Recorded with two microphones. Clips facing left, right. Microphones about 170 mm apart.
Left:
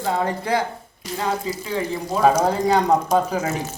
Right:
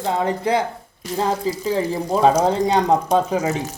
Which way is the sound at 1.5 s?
35° right (ahead or behind).